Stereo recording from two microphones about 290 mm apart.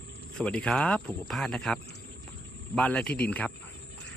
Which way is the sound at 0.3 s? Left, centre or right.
Centre.